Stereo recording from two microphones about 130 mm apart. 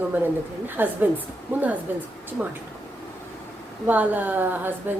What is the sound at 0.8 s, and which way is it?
A woman's voice, 15° right (ahead or behind).